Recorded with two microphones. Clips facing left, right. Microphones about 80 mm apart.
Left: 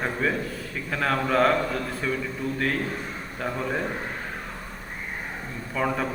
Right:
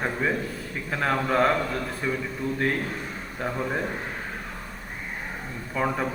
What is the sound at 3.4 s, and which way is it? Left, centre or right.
Speech, centre.